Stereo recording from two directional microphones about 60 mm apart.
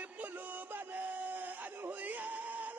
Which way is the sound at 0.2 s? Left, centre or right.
Right.